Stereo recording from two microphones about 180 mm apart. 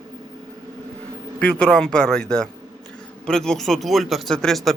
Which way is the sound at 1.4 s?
5° left (ahead or behind).